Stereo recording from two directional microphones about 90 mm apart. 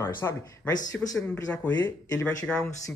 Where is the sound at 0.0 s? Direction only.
30° left (ahead or behind).